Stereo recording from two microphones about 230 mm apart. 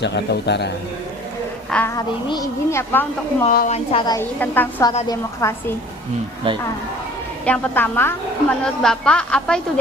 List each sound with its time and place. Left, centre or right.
0.0 s a man's voice: left
1.7 s a woman's voice: centre
3.4 s a woman's voice: left
3.9 s a woman's voice: centre
4.9 s a woman's voice: centre
7.4 s a woman's voice: centre